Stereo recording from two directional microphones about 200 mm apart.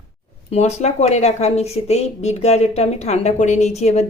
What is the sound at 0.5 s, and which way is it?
Speech, 30° left (ahead or behind).